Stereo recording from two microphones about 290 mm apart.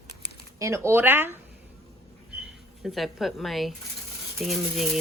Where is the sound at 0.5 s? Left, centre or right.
Centre.